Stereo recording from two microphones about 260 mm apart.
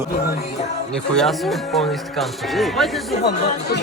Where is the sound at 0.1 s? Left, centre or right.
Left.